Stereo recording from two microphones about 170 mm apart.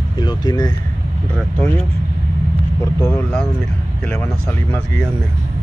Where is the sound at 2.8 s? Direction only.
15° left (ahead or behind).